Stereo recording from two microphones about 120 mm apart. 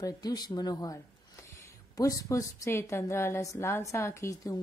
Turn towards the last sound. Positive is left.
turn(degrees=25)  # may be behind; listen again after turning